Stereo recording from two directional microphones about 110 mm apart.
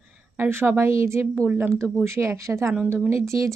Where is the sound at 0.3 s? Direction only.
20° right (ahead or behind).